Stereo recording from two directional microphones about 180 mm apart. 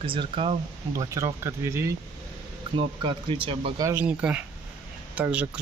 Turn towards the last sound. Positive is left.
turn(degrees=-5)  # may be behind; listen again after turning